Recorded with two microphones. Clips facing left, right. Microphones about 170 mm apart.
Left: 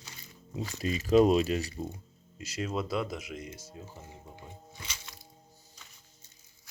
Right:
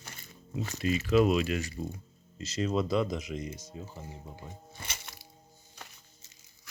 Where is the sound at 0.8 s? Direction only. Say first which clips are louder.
Left 2 dB; 40° left (ahead or behind).